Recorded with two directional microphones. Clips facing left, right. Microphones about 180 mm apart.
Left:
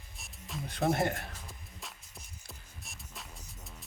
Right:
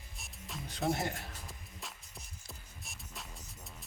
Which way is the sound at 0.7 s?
55° left (ahead or behind).